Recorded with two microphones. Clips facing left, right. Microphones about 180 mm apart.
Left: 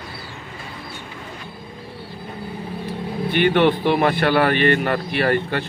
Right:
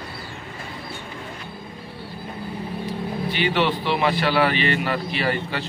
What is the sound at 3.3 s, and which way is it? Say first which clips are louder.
A man's voice: left 6 dB; 55° left (ahead or behind).